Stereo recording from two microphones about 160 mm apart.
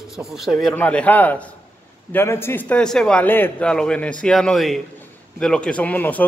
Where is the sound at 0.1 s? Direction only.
Centre (ahead or behind).